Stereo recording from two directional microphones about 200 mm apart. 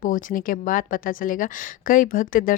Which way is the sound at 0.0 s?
40° left (ahead or behind).